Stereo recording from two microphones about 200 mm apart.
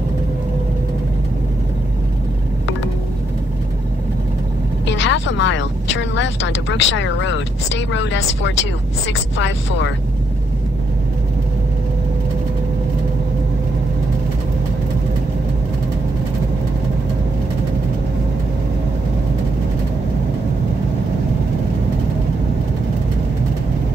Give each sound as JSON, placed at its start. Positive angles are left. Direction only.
{"t": 4.8, "sound": "speech", "side_deg": 65}